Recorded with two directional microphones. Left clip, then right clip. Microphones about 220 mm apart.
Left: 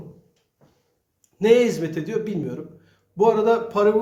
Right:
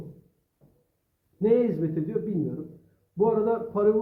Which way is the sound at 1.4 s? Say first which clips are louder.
Left 6 dB; 20° left (ahead or behind).